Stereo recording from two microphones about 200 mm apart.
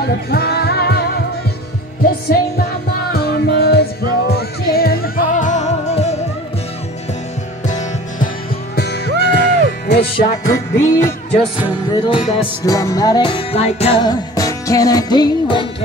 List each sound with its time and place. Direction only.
0.0 s music: 50° left (ahead or behind)
3.1 s music: 50° left (ahead or behind); by 6.1 s 35° left (ahead or behind)
7.6 s music: 40° left (ahead or behind)
8.7 s music: 55° left (ahead or behind)
10.5 s music: 15° left (ahead or behind); by 14.0 s 30° left (ahead or behind)
14.0 s music: 15° left (ahead or behind)